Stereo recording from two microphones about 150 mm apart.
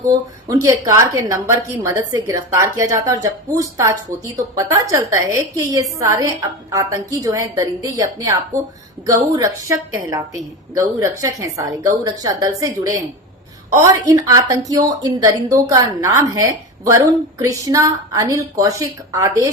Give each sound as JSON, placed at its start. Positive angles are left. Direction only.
{"t": 0.0, "sound": "a woman's voice", "side_deg": -25}